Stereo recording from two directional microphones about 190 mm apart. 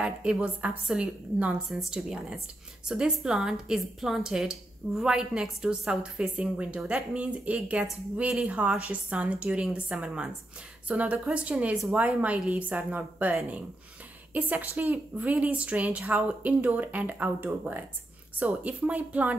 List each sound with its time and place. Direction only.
0.0 s a woman's voice: 5° right (ahead or behind)